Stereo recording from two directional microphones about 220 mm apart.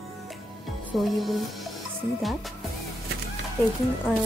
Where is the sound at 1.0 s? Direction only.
Centre (ahead or behind).